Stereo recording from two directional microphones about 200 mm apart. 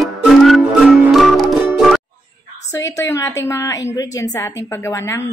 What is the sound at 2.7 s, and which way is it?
Speech, 15° left (ahead or behind).